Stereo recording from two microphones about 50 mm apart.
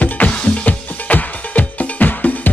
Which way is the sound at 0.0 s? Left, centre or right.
Left.